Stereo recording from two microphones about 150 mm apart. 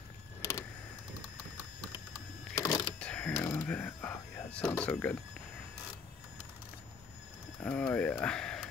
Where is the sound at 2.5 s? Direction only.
25° left (ahead or behind).